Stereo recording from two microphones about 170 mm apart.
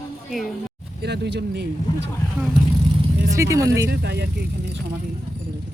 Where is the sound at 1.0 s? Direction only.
80° right.